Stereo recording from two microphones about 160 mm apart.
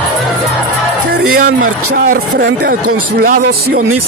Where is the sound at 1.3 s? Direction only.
70° right (ahead or behind).